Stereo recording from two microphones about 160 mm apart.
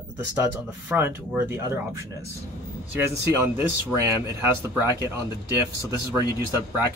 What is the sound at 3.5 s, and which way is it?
Speech, 15° right (ahead or behind).